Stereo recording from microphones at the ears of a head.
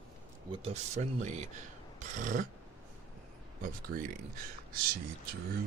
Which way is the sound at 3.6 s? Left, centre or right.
Right.